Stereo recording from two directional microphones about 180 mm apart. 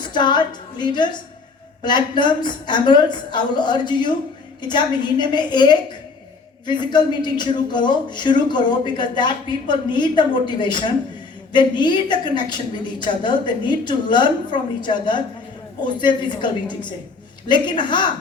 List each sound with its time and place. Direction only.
0.0 s a woman's voice: 25° left (ahead or behind)